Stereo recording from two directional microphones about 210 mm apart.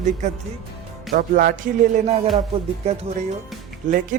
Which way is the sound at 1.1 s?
45° right (ahead or behind).